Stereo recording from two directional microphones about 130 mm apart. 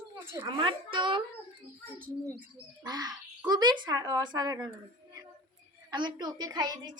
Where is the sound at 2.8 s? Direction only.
30° right (ahead or behind).